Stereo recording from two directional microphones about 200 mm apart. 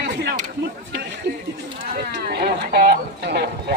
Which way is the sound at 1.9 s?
50° right (ahead or behind).